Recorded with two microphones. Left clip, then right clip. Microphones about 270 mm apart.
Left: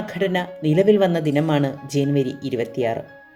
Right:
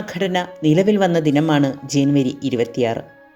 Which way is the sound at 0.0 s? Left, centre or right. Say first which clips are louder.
Right 1 dB; centre.